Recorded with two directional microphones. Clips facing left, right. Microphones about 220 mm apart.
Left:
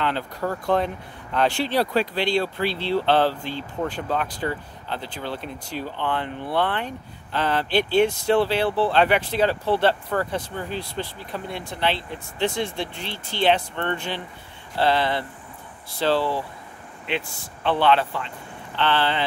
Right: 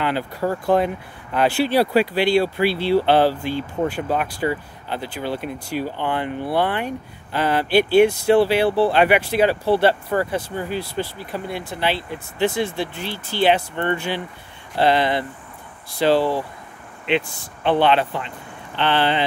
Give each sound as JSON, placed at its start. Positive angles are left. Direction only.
{"t": 0.0, "sound": "speech", "side_deg": -10}